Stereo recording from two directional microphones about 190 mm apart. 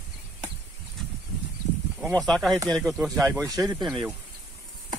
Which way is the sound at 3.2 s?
15° right (ahead or behind).